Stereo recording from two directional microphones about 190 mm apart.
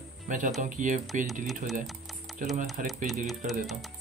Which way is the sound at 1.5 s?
Centre (ahead or behind).